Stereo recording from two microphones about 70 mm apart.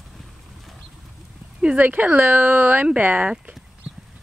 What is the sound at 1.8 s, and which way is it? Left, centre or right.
Speech, right.